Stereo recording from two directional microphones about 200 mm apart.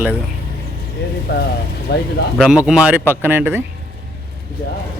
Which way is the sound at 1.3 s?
55° left (ahead or behind).